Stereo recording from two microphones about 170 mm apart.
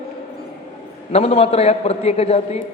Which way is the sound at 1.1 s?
35° left (ahead or behind).